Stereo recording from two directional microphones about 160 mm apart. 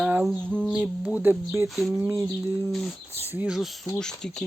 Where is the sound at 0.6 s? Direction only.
5° right (ahead or behind).